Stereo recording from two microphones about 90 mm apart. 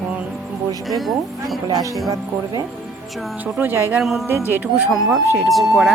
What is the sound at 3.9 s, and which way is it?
Speech, centre (ahead or behind).